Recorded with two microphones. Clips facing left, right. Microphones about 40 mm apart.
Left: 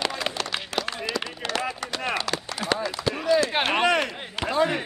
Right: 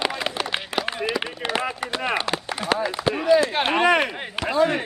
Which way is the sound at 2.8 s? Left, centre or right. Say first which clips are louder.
Right 4 dB; right.